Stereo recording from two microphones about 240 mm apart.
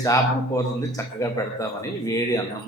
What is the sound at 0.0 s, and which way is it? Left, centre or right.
Speech, centre.